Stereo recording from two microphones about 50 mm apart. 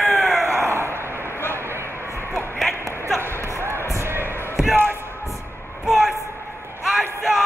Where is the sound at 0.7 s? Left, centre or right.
Right.